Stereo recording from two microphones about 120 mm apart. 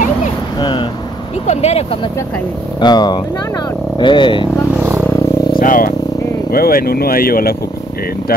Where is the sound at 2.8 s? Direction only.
35° left (ahead or behind).